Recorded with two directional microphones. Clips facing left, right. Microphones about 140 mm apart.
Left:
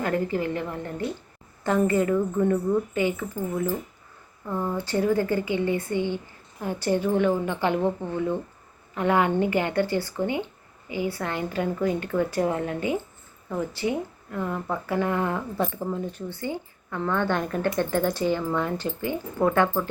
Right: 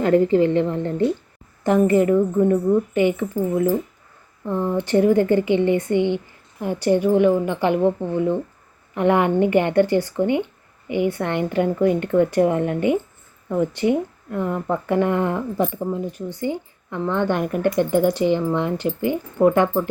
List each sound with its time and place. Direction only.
0.0 s a woman's voice: 25° right (ahead or behind)
1.6 s a woman's voice: 15° right (ahead or behind)
4.7 s a woman's voice: 20° right (ahead or behind)
10.8 s a woman's voice: 60° right (ahead or behind)
11.1 s a woman's voice: 20° right (ahead or behind)
12.6 s speech: 60° right (ahead or behind)
13.6 s a woman's voice: 20° right (ahead or behind)